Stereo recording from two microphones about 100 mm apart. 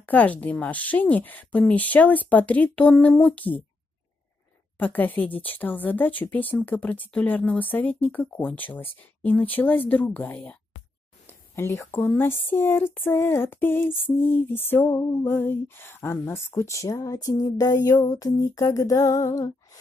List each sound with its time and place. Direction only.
0.0 s speech: 15° left (ahead or behind)
4.7 s speech: 15° left (ahead or behind); by 17.9 s 35° left (ahead or behind)
18.0 s female singing: 40° left (ahead or behind)